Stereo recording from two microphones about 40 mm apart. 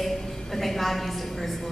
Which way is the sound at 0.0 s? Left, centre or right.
Centre.